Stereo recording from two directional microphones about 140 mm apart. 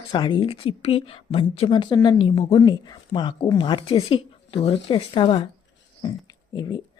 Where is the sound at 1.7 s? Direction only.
35° left (ahead or behind).